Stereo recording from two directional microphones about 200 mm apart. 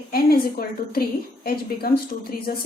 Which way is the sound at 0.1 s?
50° left (ahead or behind).